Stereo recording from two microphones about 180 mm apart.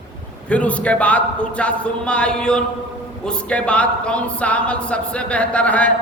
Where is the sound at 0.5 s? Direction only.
5° left (ahead or behind).